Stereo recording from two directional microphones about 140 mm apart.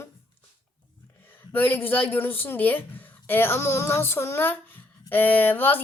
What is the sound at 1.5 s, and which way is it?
Speech, 15° left (ahead or behind).